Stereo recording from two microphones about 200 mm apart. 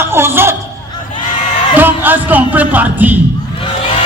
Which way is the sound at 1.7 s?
10° right (ahead or behind).